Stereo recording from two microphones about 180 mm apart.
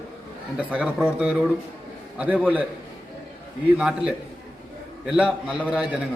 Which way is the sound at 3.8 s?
5° right (ahead or behind).